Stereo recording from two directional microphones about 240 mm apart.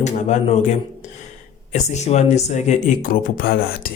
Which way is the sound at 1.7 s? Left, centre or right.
Left.